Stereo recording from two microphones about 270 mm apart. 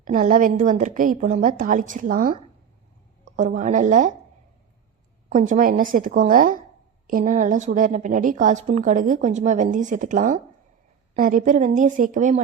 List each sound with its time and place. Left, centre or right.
0.0 s a woman's voice: right
5.3 s a woman's voice: right